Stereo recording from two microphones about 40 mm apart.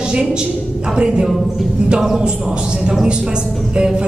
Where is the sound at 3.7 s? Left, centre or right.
Right.